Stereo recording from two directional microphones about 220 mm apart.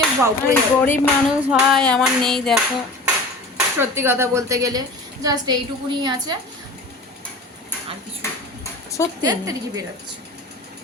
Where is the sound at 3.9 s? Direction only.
10° right (ahead or behind).